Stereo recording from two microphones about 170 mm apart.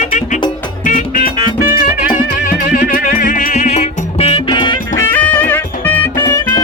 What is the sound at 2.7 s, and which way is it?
Music, 50° left (ahead or behind).